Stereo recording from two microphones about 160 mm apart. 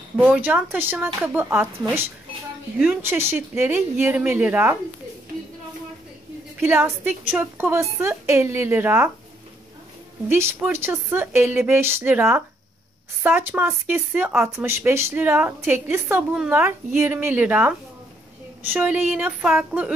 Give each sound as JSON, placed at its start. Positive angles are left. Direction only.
{"t": 0.2, "sound": "speech", "side_deg": -10}
{"t": 6.6, "sound": "speech", "side_deg": -15}
{"t": 10.2, "sound": "speech", "side_deg": -15}